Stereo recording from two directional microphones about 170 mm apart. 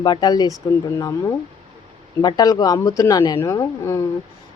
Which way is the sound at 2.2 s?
25° left (ahead or behind).